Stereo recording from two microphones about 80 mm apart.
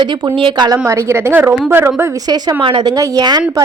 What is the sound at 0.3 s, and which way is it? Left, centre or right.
Speech, right.